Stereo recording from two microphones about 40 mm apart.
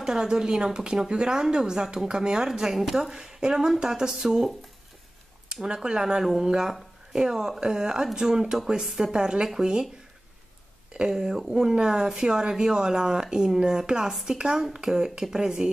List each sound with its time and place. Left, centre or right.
0.0 s speech: centre
5.5 s a woman's voice: centre
10.9 s speech: centre